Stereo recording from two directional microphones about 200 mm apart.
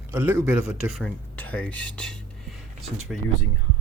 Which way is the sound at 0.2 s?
10° right (ahead or behind).